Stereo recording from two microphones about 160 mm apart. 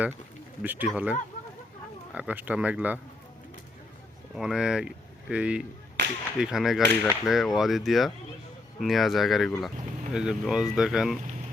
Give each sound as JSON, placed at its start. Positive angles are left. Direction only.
{"t": 0.6, "sound": "speech", "side_deg": -10}
{"t": 2.1, "sound": "speech", "side_deg": -10}
{"t": 4.4, "sound": "speech", "side_deg": -5}
{"t": 6.0, "sound": "whip", "side_deg": -90}
{"t": 6.4, "sound": "speech", "side_deg": 0}